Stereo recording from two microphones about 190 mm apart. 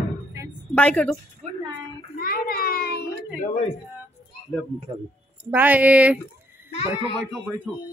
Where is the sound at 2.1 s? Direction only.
50° left (ahead or behind).